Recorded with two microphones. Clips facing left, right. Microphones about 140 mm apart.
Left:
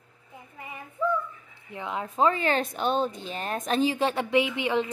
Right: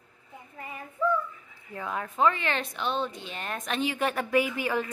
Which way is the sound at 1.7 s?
20° left (ahead or behind).